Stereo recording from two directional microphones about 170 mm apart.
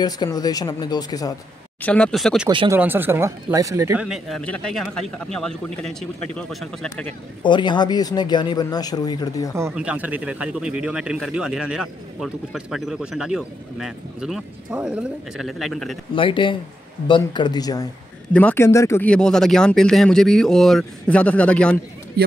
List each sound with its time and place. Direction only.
0.0 s speech: 25° left (ahead or behind)
1.8 s speech: 5° left (ahead or behind)
7.4 s speech: 25° left (ahead or behind)
9.8 s speech: 10° right (ahead or behind)
16.2 s speech: 30° left (ahead or behind)
18.3 s speech: 10° left (ahead or behind)